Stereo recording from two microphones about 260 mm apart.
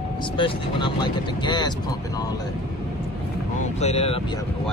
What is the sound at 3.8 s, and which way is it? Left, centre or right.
Speech, left.